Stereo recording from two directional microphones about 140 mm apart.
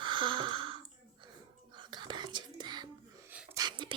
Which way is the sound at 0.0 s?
35° right (ahead or behind).